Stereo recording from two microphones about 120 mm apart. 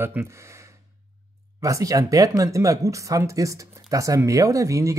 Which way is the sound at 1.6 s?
25° right (ahead or behind).